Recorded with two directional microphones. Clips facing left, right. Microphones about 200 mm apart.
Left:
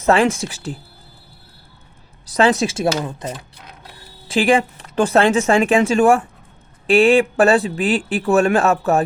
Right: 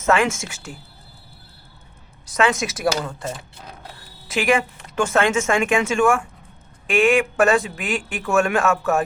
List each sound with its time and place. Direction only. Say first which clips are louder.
0.0 s speech: left 4 dB; 35° left (ahead or behind)
2.2 s speech: left 5 dB; 35° left (ahead or behind)
4.3 s speech: left 4 dB; 30° left (ahead or behind)